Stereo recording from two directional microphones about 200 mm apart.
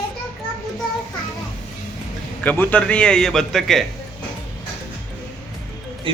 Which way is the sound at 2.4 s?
10° left (ahead or behind).